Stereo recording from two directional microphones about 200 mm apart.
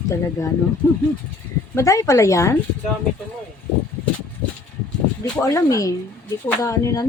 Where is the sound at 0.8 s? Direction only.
10° left (ahead or behind).